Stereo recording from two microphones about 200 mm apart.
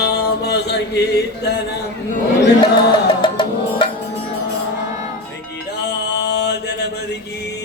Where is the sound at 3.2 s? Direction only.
25° left (ahead or behind).